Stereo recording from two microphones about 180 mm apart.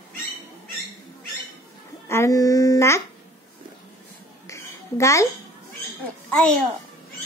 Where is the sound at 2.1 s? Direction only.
15° left (ahead or behind).